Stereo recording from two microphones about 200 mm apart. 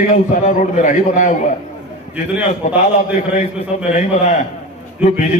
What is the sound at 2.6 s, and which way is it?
A man's voice, 35° left (ahead or behind).